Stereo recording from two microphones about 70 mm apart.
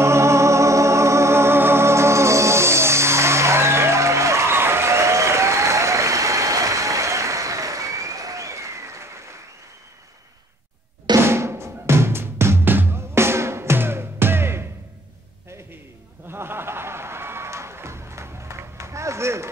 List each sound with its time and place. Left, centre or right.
0.0 s music: right
11.1 s drum: right
16.3 s music: right